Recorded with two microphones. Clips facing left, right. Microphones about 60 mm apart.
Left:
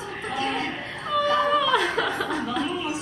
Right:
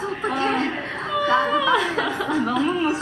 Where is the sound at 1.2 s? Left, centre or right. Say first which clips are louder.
Right 3 dB; right.